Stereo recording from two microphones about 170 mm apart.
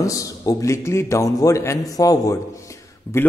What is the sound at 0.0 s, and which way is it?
A man's voice, 20° left (ahead or behind).